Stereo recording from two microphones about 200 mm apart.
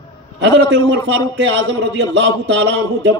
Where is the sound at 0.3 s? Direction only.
60° right (ahead or behind).